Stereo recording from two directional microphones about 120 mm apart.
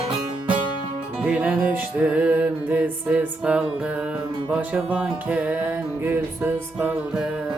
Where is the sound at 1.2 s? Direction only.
10° right (ahead or behind).